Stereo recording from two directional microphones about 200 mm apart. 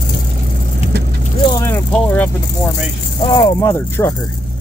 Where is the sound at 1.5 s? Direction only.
10° left (ahead or behind).